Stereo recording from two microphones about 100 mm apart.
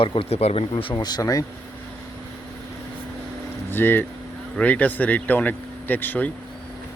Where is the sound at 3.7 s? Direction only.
20° left (ahead or behind).